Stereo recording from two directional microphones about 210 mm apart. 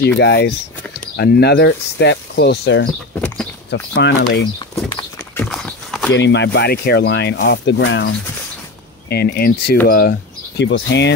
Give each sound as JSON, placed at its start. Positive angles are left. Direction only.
{"t": 0.0, "sound": "speech", "side_deg": 55}
{"t": 3.9, "sound": "speech", "side_deg": 55}
{"t": 5.4, "sound": "clip-clop", "side_deg": 0}
{"t": 6.1, "sound": "speech", "side_deg": 55}
{"t": 9.1, "sound": "speech", "side_deg": 50}